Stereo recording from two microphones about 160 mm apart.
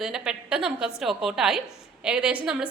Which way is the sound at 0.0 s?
5° right (ahead or behind).